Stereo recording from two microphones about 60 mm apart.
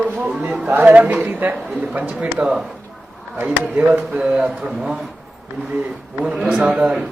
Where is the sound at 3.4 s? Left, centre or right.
Right.